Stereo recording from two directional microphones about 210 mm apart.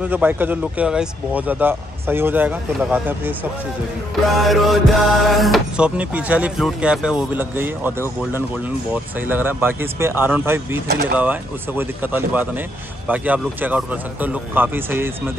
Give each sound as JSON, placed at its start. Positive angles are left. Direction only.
{"t": 0.0, "sound": "speech", "side_deg": -5}
{"t": 4.4, "sound": "speech", "side_deg": 0}
{"t": 9.3, "sound": "speech", "side_deg": -10}